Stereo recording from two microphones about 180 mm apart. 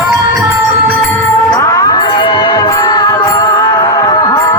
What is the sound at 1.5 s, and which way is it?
Music, 20° left (ahead or behind).